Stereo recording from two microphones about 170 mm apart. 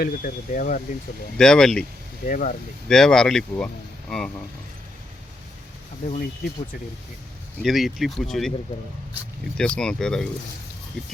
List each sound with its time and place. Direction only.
0.0 s speech: 50° left (ahead or behind)
1.4 s speech: 5° left (ahead or behind)
2.2 s speech: 50° left (ahead or behind)
2.9 s speech: 5° left (ahead or behind)
7.6 s speech: centre (ahead or behind)
9.6 s speech: 5° left (ahead or behind)